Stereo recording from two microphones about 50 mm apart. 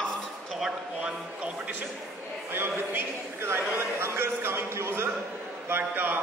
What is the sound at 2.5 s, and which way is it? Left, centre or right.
A man's voice, right.